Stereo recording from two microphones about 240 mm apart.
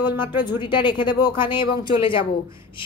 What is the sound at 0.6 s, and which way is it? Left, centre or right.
A woman's voice, centre.